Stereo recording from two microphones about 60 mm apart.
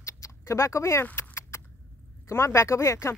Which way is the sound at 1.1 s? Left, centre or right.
Left.